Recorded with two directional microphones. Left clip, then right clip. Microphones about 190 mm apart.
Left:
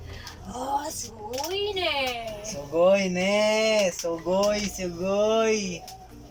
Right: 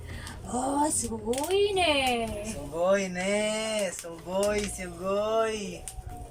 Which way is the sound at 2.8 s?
10° left (ahead or behind).